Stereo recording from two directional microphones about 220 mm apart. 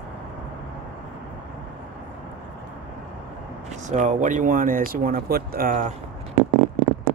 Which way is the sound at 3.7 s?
35° right (ahead or behind).